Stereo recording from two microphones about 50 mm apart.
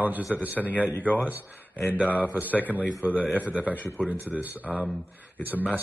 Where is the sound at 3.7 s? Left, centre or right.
Left.